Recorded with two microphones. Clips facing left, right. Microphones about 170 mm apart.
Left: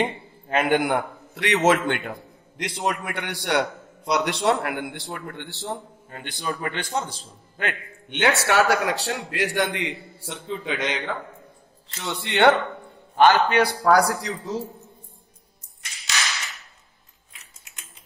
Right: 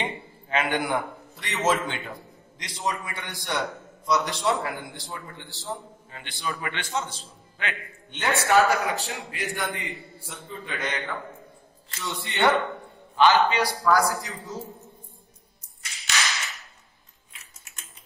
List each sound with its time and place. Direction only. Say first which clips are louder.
0.0 s a man's voice: left 6 dB; 45° left (ahead or behind)
8.1 s a man's voice: left 1 dB; 75° left (ahead or behind)
12.0 s speech: left 5 dB; 65° left (ahead or behind)
13.1 s a man's voice: left 3 dB; 50° left (ahead or behind); by 14.6 s 70° left (ahead or behind)